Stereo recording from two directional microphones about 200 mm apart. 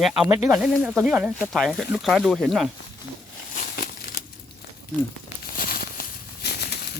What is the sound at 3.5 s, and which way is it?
Crumpling, 45° left (ahead or behind).